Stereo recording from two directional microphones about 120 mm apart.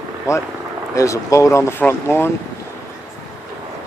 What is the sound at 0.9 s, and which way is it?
Speech, 25° left (ahead or behind).